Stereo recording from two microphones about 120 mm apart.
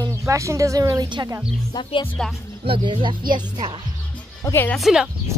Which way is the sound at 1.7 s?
45° left (ahead or behind).